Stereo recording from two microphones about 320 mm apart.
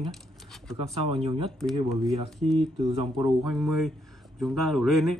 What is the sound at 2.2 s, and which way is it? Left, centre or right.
Speech, centre.